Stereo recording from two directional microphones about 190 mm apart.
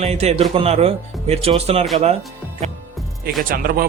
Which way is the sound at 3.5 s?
50° right (ahead or behind).